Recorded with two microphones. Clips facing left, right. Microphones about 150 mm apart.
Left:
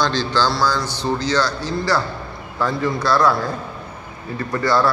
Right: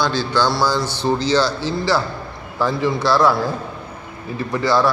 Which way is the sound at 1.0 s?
25° right (ahead or behind).